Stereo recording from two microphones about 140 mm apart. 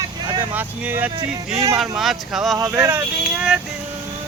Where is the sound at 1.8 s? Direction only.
Centre (ahead or behind).